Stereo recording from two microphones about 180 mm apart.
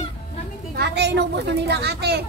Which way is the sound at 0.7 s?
70° right (ahead or behind).